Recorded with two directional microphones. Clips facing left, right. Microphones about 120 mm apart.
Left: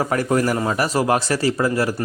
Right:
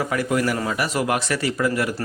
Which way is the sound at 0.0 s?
40° left (ahead or behind).